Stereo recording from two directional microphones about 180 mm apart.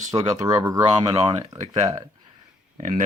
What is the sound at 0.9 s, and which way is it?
Speech, 35° right (ahead or behind).